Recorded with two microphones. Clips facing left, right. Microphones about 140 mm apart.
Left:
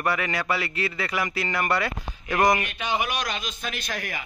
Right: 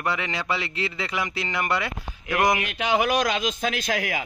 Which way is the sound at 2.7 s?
90° right.